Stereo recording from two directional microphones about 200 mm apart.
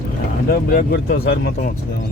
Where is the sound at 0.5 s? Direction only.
45° left (ahead or behind).